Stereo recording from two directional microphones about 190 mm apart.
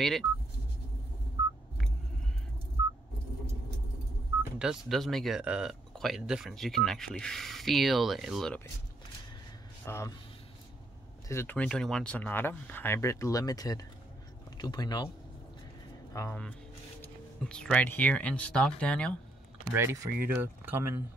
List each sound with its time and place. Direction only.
4.4 s speech: 5° right (ahead or behind)
9.8 s speech: 15° left (ahead or behind)
11.2 s speech: 10° left (ahead or behind)
16.1 s speech: 15° left (ahead or behind)
19.7 s speech: 15° right (ahead or behind)